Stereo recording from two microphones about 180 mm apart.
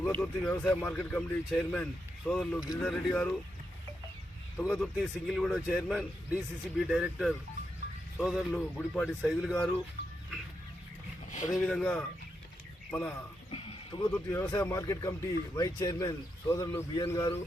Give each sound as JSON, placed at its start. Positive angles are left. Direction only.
{"t": 0.0, "sound": "speech", "side_deg": 10}
{"t": 4.6, "sound": "speech", "side_deg": -5}
{"t": 11.6, "sound": "speech", "side_deg": 5}
{"t": 13.5, "sound": "horse", "side_deg": 30}
{"t": 14.3, "sound": "speech", "side_deg": 15}